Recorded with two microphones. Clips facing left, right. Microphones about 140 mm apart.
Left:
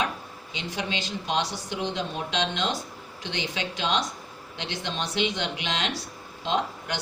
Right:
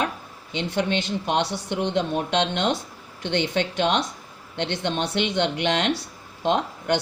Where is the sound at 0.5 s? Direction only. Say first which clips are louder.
Right 8 dB; 60° right (ahead or behind).